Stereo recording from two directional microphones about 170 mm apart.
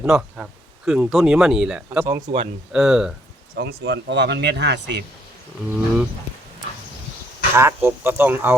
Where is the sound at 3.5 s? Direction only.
90° right.